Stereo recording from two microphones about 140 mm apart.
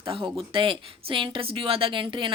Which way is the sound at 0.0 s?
40° right (ahead or behind).